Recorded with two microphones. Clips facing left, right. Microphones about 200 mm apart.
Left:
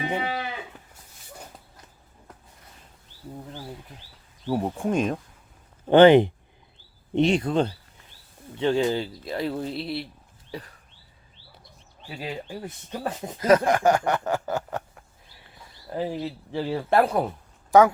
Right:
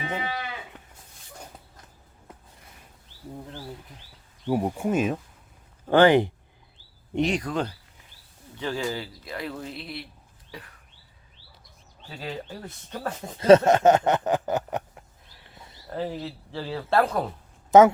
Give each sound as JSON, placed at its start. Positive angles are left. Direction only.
{"t": 0.2, "sound": "livestock", "side_deg": 30}
{"t": 4.4, "sound": "speech", "side_deg": -10}
{"t": 5.9, "sound": "speech", "side_deg": 20}
{"t": 10.5, "sound": "bird", "side_deg": 35}
{"t": 12.0, "sound": "speech", "side_deg": 10}
{"t": 13.4, "sound": "a sound", "side_deg": -25}
{"t": 15.9, "sound": "speech", "side_deg": 15}
{"t": 17.7, "sound": "speech", "side_deg": -20}